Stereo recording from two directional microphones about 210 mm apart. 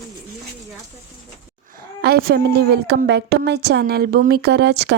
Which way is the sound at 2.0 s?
50° right (ahead or behind).